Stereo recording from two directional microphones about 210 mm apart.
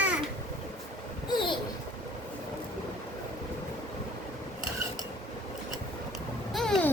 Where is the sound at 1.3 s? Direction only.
20° left (ahead or behind).